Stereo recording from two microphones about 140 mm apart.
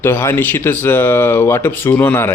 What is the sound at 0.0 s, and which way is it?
Speech, 15° left (ahead or behind).